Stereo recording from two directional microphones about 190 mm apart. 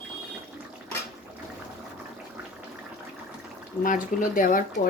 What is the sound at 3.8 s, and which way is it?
Speech, 45° left (ahead or behind).